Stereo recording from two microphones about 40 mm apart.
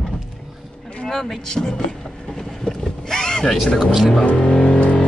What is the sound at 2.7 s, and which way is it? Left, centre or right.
Boat, centre.